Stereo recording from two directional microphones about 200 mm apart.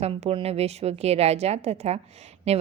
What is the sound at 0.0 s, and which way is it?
A woman's voice, 30° right (ahead or behind).